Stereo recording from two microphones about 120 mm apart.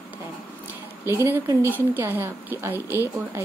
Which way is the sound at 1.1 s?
20° right (ahead or behind).